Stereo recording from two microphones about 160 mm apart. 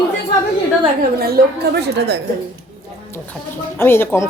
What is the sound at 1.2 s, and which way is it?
A woman's voice, 70° right (ahead or behind).